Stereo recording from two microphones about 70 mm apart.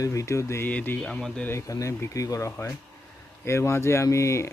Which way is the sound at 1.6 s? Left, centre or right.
Left.